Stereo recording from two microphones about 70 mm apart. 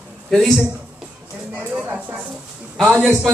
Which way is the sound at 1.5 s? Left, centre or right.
Right.